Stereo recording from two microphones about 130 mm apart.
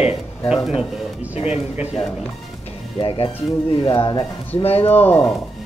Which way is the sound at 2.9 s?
40° left (ahead or behind).